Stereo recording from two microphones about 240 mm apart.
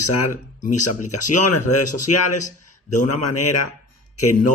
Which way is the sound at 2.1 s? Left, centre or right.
Left.